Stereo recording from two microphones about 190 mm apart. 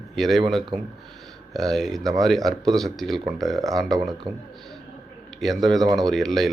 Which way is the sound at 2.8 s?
Centre (ahead or behind).